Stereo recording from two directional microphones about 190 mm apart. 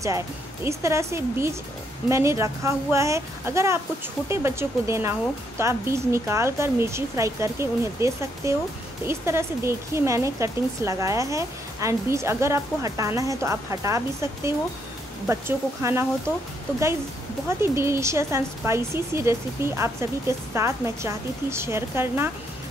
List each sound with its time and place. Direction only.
0.7 s speech: 15° right (ahead or behind)
17.5 s speech: 15° right (ahead or behind)